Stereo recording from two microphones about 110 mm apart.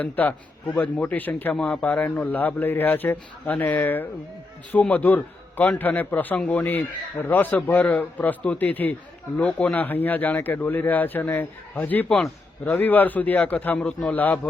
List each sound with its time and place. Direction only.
0.0 s speech: 15° left (ahead or behind)
12.0 s a man's voice: centre (ahead or behind)
12.6 s speech: 15° left (ahead or behind)